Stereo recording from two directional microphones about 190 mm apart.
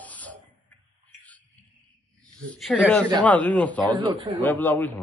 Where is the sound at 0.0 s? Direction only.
10° left (ahead or behind).